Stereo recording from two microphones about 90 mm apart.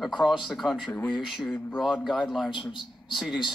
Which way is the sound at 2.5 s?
65° left (ahead or behind).